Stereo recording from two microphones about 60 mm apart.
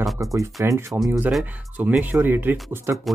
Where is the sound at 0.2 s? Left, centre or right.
Right.